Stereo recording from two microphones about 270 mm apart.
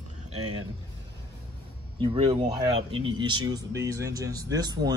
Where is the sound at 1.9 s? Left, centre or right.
Right.